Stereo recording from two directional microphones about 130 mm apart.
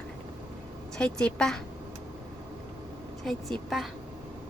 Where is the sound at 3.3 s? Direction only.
Centre (ahead or behind).